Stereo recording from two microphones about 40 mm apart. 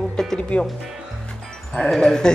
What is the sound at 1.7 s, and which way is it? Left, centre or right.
Speech, centre.